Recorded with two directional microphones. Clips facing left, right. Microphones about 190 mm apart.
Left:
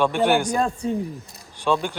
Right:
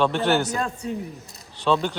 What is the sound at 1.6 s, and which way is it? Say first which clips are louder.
Speech: right 1 dB; 10° left (ahead or behind).